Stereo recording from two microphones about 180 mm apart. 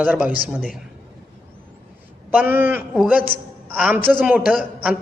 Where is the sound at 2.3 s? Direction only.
10° right (ahead or behind).